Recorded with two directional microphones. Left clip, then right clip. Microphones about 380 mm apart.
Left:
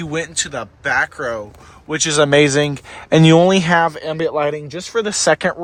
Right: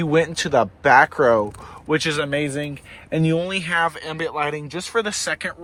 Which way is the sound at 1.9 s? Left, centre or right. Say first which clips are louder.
Left 7 dB; centre.